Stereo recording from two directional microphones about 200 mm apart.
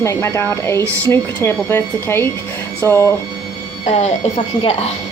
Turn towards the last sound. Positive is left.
turn(degrees=30)  # may be behind; listen again after turning